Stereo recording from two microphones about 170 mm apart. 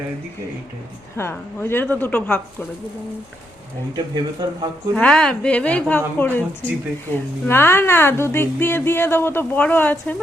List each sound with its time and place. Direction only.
1.1 s a woman's voice: 15° left (ahead or behind)
3.9 s speech: 25° right (ahead or behind)
4.9 s a woman's voice: 5° left (ahead or behind)